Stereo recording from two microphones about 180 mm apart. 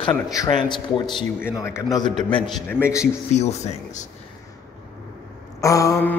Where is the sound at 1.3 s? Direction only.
15° left (ahead or behind).